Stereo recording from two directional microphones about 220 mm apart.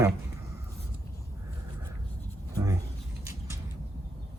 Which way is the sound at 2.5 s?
15° right (ahead or behind).